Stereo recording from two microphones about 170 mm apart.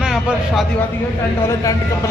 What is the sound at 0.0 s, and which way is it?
Speech, centre (ahead or behind).